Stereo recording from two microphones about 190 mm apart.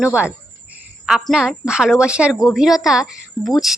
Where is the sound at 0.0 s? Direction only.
5° right (ahead or behind).